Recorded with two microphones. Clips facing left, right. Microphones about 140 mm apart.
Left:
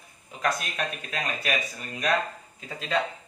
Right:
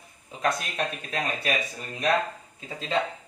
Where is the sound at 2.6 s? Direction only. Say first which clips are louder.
Even; 25° right (ahead or behind).